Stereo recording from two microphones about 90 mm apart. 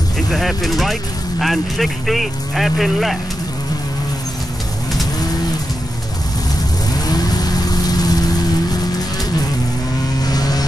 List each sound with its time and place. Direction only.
0.3 s speech: centre (ahead or behind)
6.9 s vehicle: 45° left (ahead or behind)
10.2 s vehicle: 45° left (ahead or behind)